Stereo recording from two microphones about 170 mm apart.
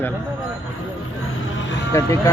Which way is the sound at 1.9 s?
15° left (ahead or behind).